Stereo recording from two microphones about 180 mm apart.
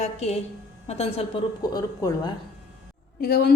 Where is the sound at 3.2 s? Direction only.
60° left (ahead or behind).